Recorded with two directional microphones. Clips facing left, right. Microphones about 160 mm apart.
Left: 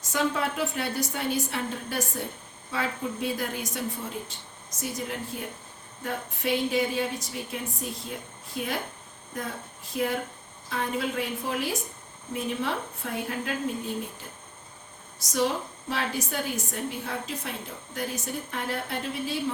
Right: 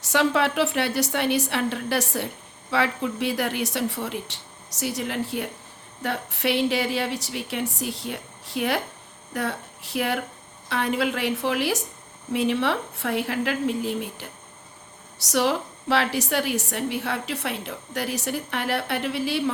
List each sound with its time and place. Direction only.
0.0 s a woman's voice: 80° right